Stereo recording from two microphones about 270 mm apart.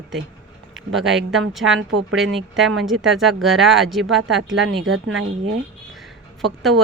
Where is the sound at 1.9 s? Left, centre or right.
Right.